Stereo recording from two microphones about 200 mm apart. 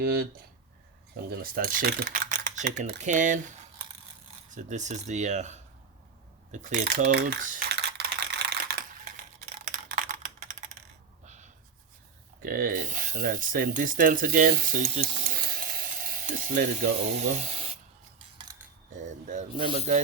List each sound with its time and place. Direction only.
1.3 s speech: 45° right (ahead or behind)
4.5 s speech: 35° right (ahead or behind)
6.5 s typing: 40° right (ahead or behind)
9.9 s typing: 40° right (ahead or behind)
12.4 s speech: 45° right (ahead or behind)
18.9 s speech: 35° right (ahead or behind)